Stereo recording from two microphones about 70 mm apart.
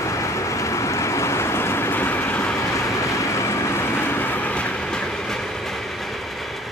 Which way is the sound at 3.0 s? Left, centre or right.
Left.